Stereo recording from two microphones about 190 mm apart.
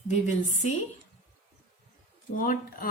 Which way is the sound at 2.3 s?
45° left (ahead or behind).